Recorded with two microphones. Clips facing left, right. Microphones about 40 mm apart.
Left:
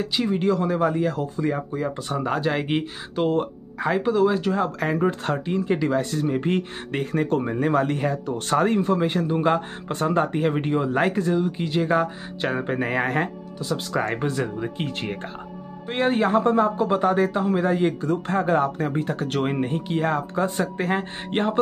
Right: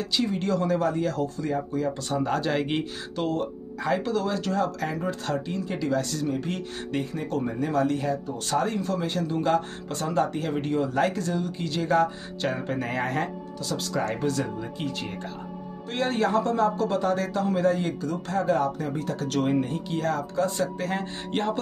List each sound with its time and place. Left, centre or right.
0.0 s speech: centre
1.4 s speech: left
3.3 s speech: left
3.9 s speech: centre
4.7 s speech: left
7.1 s speech: left
15.9 s speech: left